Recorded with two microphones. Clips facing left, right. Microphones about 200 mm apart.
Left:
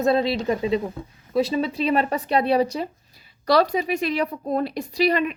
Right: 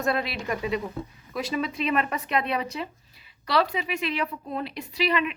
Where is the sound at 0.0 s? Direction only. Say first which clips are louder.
Left 7 dB; 25° left (ahead or behind).